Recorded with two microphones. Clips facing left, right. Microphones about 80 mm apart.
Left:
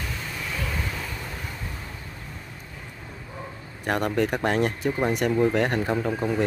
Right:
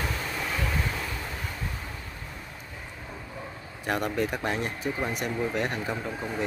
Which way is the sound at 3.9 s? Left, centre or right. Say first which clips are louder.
Left 4 dB; left.